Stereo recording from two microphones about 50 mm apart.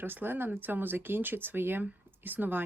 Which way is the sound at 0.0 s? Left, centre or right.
Right.